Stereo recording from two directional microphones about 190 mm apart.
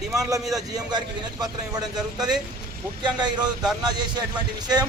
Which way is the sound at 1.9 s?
5° right (ahead or behind).